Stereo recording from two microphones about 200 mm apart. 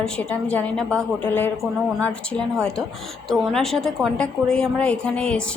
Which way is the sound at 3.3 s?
Centre (ahead or behind).